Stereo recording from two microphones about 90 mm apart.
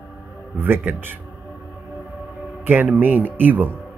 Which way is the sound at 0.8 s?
25° right (ahead or behind).